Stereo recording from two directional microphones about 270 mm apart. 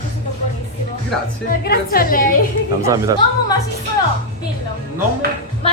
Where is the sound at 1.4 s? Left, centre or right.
Left.